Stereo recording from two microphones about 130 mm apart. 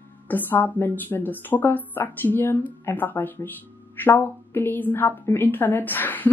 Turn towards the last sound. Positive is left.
turn(degrees=15)  # may be behind; listen again after turning